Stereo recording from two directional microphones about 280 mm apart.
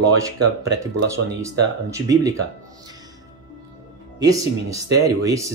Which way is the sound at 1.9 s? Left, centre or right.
Centre.